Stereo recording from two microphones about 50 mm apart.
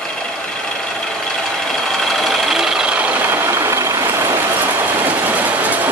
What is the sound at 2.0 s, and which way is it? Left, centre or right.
Sewing machine, centre.